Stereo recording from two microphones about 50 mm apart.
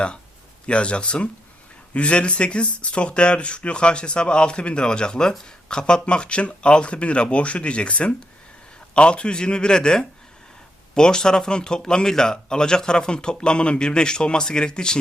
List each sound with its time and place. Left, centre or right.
0.7 s speech: left